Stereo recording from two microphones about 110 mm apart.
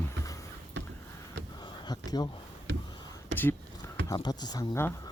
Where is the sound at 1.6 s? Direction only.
40° left (ahead or behind).